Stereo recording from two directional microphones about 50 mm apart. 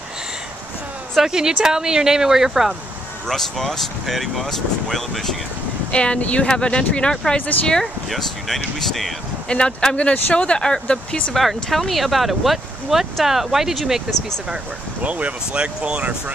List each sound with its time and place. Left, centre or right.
1.1 s speech: centre
3.3 s speech: centre
5.9 s speech: left
7.8 s speech: centre
9.5 s speech: centre
11.3 s speech: centre
15.0 s speech: right